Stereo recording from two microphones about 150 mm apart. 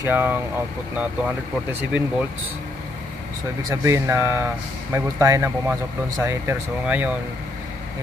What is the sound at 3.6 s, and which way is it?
Speech, 20° right (ahead or behind).